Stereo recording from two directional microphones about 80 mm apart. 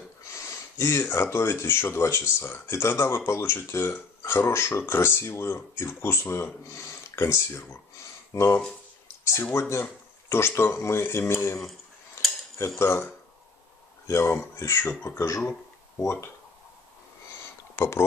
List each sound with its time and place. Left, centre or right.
0.3 s speech: left
12.2 s cutlery: left
12.5 s speech: left
17.7 s speech: left